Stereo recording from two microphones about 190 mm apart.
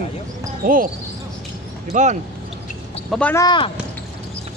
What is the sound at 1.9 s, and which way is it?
Speech, 40° right (ahead or behind).